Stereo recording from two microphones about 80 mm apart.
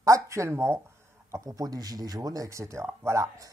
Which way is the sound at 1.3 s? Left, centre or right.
Right.